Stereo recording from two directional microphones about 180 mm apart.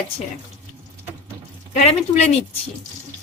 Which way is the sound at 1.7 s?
35° left (ahead or behind).